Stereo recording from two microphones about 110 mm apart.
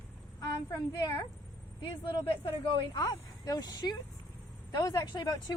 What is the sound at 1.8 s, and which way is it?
Speech, 45° left (ahead or behind).